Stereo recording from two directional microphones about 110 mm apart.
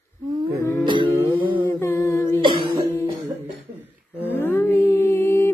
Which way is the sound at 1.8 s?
25° left (ahead or behind).